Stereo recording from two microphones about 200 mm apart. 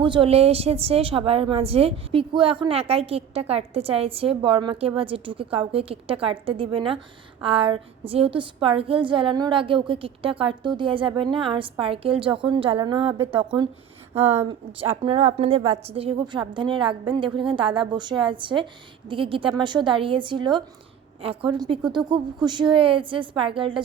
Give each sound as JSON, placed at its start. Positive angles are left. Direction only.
{"t": 0.0, "sound": "a woman's voice", "side_deg": -25}